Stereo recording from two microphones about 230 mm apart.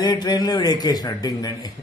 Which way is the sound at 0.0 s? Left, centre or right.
Centre.